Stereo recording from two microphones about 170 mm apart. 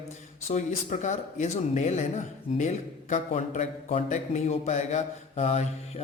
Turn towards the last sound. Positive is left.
turn(degrees=40)  # may be behind; listen again after turning